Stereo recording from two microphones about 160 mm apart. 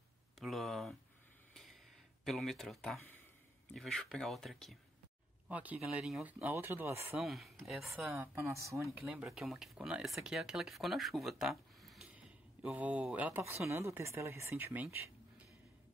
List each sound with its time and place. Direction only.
0.4 s a sound: centre (ahead or behind)
2.2 s speech: centre (ahead or behind)
5.5 s speech: 10° right (ahead or behind)
7.1 s speech: centre (ahead or behind)
8.2 s speech: 15° right (ahead or behind)
9.0 s speech: 5° right (ahead or behind)